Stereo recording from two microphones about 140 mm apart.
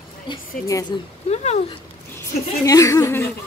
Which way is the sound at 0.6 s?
25° left (ahead or behind).